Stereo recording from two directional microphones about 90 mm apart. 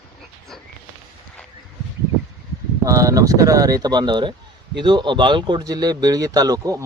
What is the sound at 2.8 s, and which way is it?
Speech, 40° right (ahead or behind).